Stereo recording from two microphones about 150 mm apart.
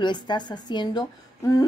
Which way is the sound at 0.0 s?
30° left (ahead or behind).